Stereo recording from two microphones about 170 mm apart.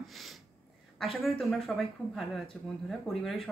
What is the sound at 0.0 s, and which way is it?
Snort, centre (ahead or behind).